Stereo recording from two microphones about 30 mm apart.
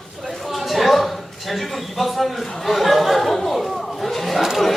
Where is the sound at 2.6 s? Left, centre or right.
Centre.